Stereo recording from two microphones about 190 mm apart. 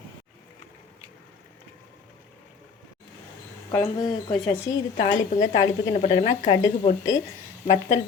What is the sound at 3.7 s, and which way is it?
Speech, 20° left (ahead or behind).